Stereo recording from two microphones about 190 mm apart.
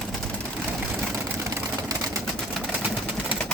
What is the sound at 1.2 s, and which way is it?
Vehicle, 15° right (ahead or behind).